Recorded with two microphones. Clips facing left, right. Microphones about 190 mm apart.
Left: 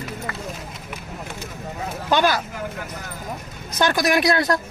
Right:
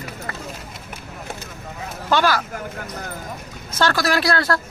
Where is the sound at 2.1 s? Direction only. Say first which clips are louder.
Even; 20° left (ahead or behind).